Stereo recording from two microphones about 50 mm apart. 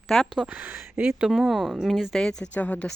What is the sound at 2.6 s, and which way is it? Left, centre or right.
Speech, left.